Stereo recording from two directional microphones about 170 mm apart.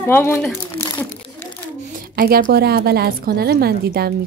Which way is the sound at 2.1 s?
65° right (ahead or behind).